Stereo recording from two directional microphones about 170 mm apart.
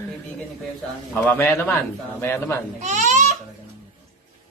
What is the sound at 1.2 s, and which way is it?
Speech, 10° left (ahead or behind).